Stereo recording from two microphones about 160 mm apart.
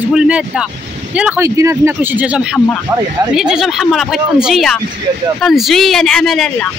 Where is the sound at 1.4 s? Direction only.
20° right (ahead or behind).